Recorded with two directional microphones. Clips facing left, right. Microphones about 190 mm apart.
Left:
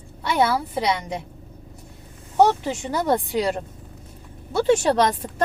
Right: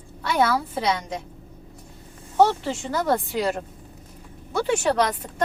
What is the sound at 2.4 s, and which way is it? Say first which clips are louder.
Speech: left 1 dB; 15° left (ahead or behind).